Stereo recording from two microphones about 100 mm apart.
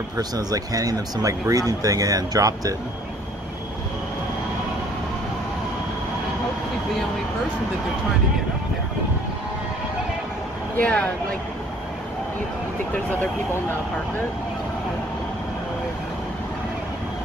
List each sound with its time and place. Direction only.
0.2 s speech: 40° right (ahead or behind)
10.8 s speech: 10° left (ahead or behind)